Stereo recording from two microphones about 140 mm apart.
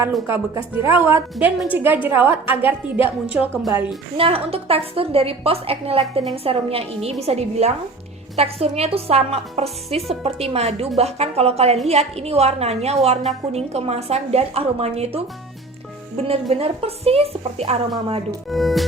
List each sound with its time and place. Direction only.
0.3 s a woman's voice: 20° right (ahead or behind)
4.2 s a woman's voice: 45° right (ahead or behind)
18.4 s speech: centre (ahead or behind)